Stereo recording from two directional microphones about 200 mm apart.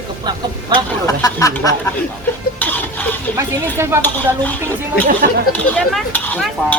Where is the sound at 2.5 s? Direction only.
10° left (ahead or behind).